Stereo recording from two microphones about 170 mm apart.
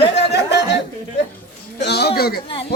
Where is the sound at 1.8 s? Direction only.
75° left (ahead or behind).